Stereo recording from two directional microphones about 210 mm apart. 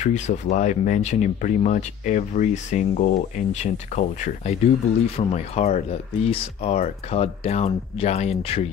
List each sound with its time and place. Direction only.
0.0 s speech: 35° left (ahead or behind)